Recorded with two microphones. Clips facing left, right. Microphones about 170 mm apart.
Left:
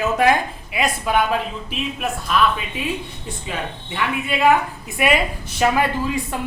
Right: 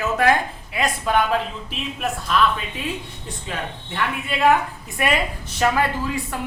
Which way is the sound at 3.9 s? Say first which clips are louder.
Left 2 dB; centre (ahead or behind).